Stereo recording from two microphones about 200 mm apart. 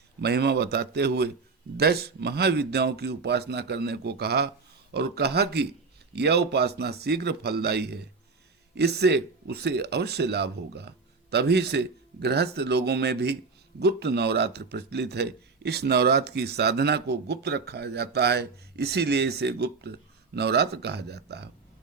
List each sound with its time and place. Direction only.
0.2 s speech: 55° right (ahead or behind)